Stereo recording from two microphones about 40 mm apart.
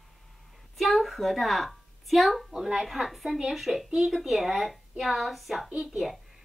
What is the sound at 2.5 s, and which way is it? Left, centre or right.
A child's voice, centre.